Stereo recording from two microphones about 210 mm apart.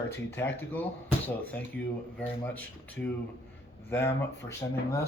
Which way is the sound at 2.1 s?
10° left (ahead or behind).